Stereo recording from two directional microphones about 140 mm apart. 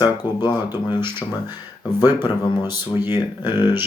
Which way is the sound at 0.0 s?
30° left (ahead or behind).